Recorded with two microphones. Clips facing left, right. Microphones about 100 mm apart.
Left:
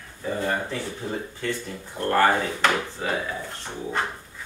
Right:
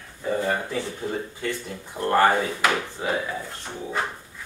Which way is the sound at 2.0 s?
20° right (ahead or behind).